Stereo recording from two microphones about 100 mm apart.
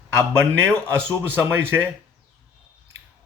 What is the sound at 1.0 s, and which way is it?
Speech, 20° right (ahead or behind).